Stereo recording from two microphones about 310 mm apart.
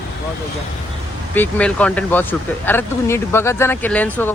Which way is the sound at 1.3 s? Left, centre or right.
Centre.